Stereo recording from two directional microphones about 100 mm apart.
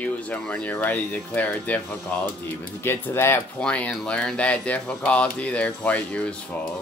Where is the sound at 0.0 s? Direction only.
15° left (ahead or behind).